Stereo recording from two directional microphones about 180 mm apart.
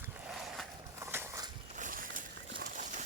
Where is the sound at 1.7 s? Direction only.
50° right (ahead or behind).